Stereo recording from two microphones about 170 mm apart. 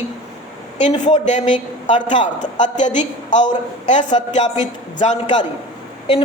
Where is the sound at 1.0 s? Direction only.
45° left (ahead or behind).